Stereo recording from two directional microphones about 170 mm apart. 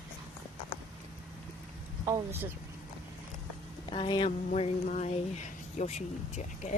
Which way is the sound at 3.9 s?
30° left (ahead or behind).